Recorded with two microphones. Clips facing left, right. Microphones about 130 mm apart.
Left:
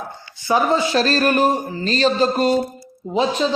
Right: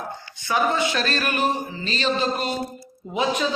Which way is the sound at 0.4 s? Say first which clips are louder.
Left 4 dB; 30° left (ahead or behind).